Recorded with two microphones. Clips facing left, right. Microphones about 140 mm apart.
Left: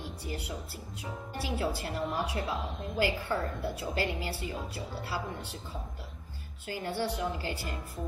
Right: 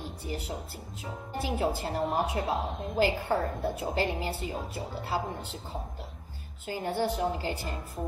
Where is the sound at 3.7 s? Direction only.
25° right (ahead or behind).